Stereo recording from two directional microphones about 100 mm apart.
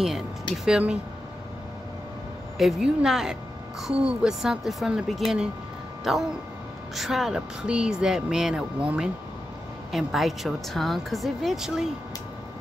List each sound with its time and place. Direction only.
0.7 s speech: 10° right (ahead or behind)
2.5 s speech: 5° right (ahead or behind)